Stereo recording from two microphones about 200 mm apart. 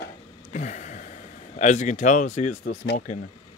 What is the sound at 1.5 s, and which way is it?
Speech, 35° left (ahead or behind).